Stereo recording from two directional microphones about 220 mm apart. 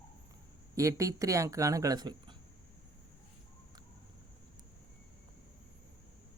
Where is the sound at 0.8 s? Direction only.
15° right (ahead or behind).